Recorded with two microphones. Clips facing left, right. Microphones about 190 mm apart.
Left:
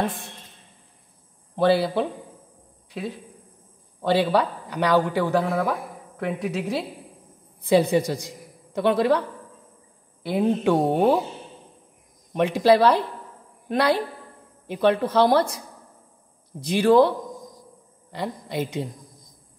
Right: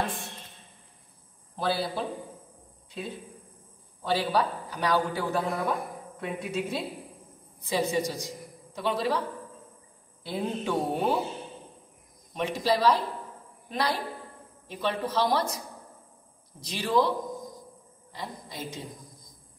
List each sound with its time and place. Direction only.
1.6 s speech: 65° left (ahead or behind)
4.0 s a man's voice: 65° left (ahead or behind)
7.6 s speech: 60° left (ahead or behind)
10.2 s a man's voice: 65° left (ahead or behind)
12.4 s speech: 60° left (ahead or behind)
16.5 s speech: 60° left (ahead or behind)
18.1 s speech: 65° left (ahead or behind)